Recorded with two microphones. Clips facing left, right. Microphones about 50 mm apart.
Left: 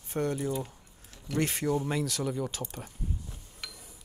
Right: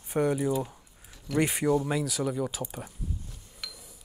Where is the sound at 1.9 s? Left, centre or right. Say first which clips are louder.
Right 2 dB; centre.